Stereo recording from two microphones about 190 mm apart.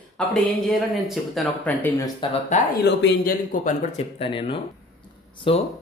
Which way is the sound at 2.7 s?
55° left (ahead or behind).